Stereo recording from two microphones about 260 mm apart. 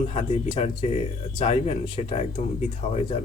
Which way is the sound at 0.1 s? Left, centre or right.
Left.